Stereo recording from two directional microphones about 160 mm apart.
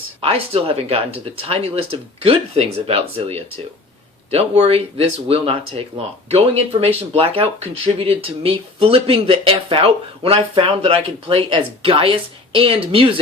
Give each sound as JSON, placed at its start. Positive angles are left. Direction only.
{"t": 0.2, "sound": "speech", "side_deg": -35}